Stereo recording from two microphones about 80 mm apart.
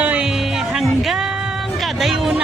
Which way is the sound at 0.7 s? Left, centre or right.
Centre.